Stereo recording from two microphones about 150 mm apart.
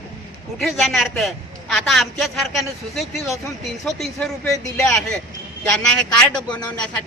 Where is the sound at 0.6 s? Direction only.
Centre (ahead or behind).